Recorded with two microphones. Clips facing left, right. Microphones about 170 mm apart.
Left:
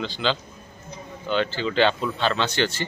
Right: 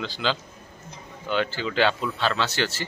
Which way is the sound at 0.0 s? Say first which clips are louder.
Left 2 dB; 5° right (ahead or behind).